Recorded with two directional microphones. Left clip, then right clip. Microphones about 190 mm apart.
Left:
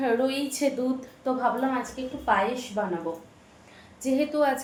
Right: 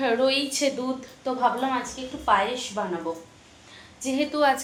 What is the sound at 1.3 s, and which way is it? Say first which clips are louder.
Speech: left 1 dB; 15° left (ahead or behind).